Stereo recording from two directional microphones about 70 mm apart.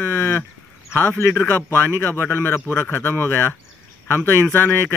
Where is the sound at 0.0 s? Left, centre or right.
Left.